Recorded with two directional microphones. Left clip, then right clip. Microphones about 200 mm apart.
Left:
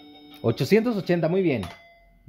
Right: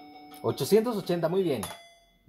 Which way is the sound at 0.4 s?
40° left (ahead or behind).